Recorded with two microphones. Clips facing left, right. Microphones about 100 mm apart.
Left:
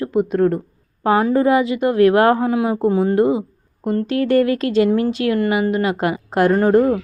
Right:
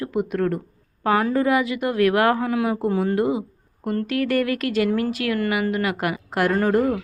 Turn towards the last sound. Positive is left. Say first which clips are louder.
# left 5 dB
turn(degrees=25)  # may be behind; listen again after turning